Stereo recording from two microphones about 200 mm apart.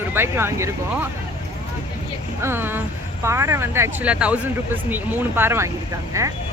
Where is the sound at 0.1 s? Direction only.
10° right (ahead or behind).